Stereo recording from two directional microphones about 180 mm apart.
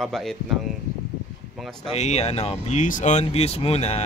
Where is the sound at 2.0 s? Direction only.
35° left (ahead or behind).